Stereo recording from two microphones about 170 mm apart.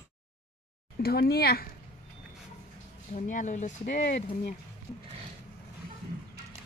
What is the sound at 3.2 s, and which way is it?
Speech, 50° left (ahead or behind).